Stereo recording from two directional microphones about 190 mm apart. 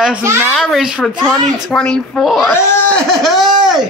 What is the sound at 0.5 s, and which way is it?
Speech, centre (ahead or behind).